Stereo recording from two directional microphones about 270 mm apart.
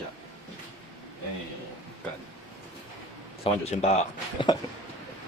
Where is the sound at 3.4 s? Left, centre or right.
Left.